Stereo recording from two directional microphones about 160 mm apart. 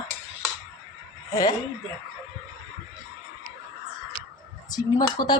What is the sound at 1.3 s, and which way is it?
Speech, 25° left (ahead or behind).